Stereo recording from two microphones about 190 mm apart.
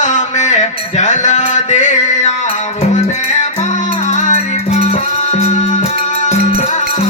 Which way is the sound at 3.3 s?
40° left (ahead or behind).